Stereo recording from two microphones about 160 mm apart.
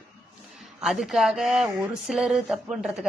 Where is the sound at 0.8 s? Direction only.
Centre (ahead or behind).